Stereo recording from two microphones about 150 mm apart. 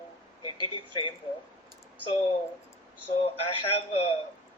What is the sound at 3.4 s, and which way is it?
Speech, 40° left (ahead or behind).